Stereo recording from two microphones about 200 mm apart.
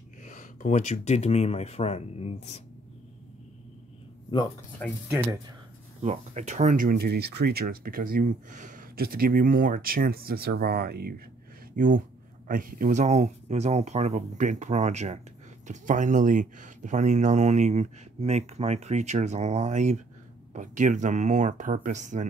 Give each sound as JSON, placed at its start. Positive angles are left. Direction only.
{"t": 0.2, "sound": "speech", "side_deg": 40}
{"t": 6.0, "sound": "speech", "side_deg": -35}
{"t": 11.7, "sound": "speech", "side_deg": -40}